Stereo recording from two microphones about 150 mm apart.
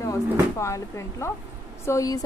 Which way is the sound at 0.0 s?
20° left (ahead or behind).